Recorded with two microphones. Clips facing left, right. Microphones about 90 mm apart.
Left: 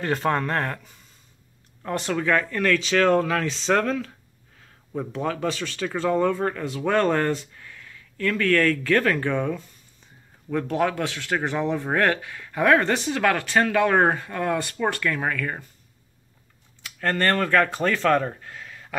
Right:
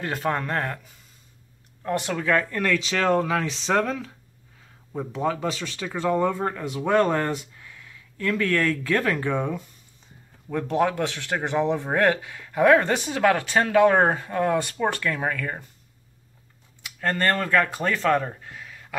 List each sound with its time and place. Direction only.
0.0 s speech: 5° right (ahead or behind)
2.1 s speech: 5° right (ahead or behind)
8.5 s speech: 15° right (ahead or behind)
17.0 s speech: 15° right (ahead or behind)
18.5 s a sound: 10° right (ahead or behind)